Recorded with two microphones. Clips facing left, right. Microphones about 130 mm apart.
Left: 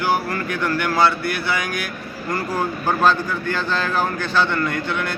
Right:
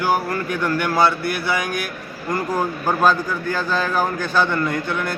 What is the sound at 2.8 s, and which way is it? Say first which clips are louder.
A man's voice: even; 10° right (ahead or behind).